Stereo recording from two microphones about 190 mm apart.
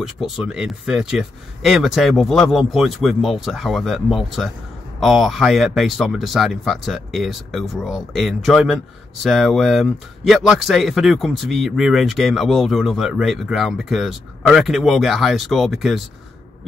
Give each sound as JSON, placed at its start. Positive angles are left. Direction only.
{"t": 0.0, "sound": "speech", "side_deg": 0}